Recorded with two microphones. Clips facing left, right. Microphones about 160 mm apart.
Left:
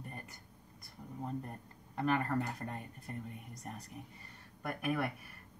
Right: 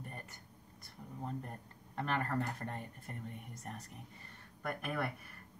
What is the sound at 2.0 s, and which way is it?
Speech, 5° left (ahead or behind).